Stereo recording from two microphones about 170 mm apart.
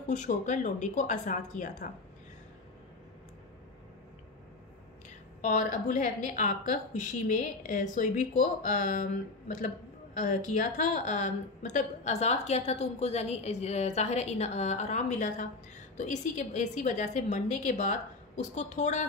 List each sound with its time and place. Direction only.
0.0 s a woman's voice: 45° left (ahead or behind)
5.4 s a woman's voice: 45° left (ahead or behind)